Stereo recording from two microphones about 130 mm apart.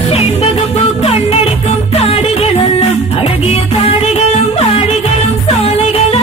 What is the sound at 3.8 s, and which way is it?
Music, 55° left (ahead or behind).